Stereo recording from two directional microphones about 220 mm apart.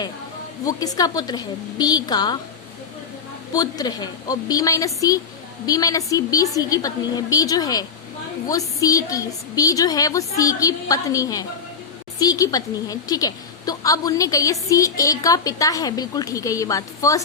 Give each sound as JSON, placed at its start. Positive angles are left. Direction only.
{"t": 0.6, "sound": "a woman's voice", "side_deg": 15}
{"t": 3.5, "sound": "a woman's voice", "side_deg": 15}